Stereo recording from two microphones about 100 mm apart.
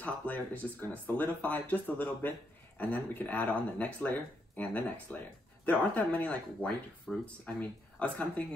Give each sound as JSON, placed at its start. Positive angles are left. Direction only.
{"t": 0.0, "sound": "speech", "side_deg": 15}